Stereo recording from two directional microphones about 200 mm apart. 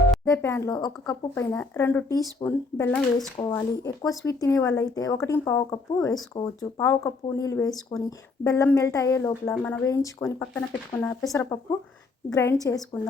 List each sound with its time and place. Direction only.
0.3 s speech: 10° left (ahead or behind)
3.5 s speech: 15° left (ahead or behind)